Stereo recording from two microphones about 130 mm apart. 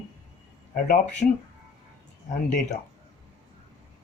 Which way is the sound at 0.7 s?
90° left.